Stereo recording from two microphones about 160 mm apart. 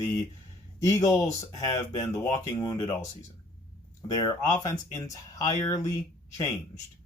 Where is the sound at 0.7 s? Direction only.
20° left (ahead or behind).